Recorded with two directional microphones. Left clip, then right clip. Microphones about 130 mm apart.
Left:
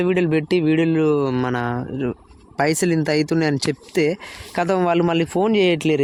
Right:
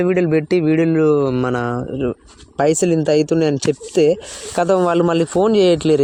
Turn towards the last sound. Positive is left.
turn(degrees=5)  # may be behind; listen again after turning